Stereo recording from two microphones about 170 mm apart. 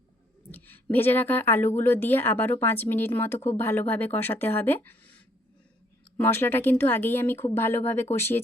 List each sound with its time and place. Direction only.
0.5 s a woman's voice: 10° left (ahead or behind)